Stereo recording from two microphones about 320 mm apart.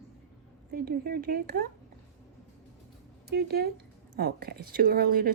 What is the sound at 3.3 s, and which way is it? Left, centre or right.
Speech, right.